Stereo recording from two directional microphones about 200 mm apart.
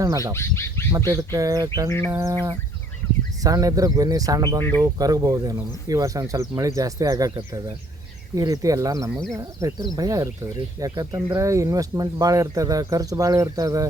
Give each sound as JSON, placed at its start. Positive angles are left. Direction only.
{"t": 0.3, "sound": "speech", "side_deg": 15}
{"t": 0.9, "sound": "speech", "side_deg": -20}